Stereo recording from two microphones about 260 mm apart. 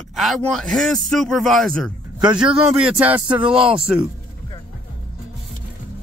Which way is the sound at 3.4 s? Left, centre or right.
Centre.